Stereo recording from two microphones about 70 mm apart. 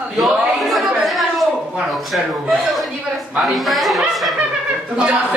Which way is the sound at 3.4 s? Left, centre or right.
Centre.